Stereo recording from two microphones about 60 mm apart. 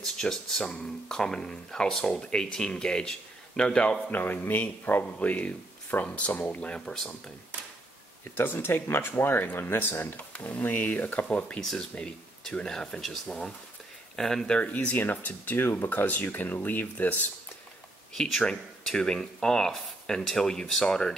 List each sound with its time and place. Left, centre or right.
0.0 s speech: centre; by 6.7 s left
6.7 s speech: centre
8.4 s speech: left
10.3 s speech: left
14.6 s speech: left
18.1 s speech: centre